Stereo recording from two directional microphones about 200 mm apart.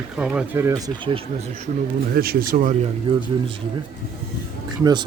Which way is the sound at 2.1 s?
50° right (ahead or behind).